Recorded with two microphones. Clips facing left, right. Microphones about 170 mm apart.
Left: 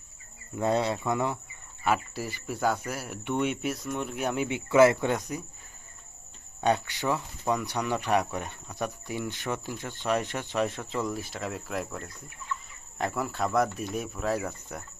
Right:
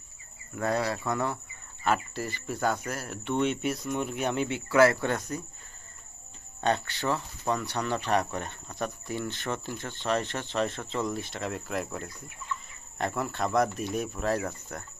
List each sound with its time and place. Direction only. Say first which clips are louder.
0.5 s speech: left 2 dB; 20° left (ahead or behind); by 4.4 s 5° left (ahead or behind)
4.4 s speech: left 2 dB; 20° left (ahead or behind)
6.6 s speech: left 2 dB; 10° left (ahead or behind)